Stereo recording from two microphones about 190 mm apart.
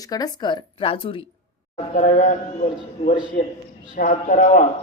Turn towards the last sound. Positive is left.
turn(degrees=40)  # may be behind; listen again after turning